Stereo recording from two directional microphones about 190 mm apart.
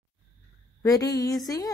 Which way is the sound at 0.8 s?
20° left (ahead or behind).